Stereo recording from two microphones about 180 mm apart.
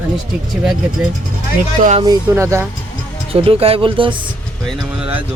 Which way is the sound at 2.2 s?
15° right (ahead or behind).